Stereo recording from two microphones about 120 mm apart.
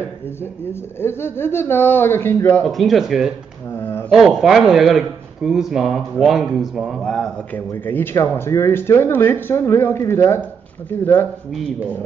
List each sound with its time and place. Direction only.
0.9 s speech: 20° left (ahead or behind)
2.6 s speech: centre (ahead or behind)
7.5 s speech: 15° left (ahead or behind)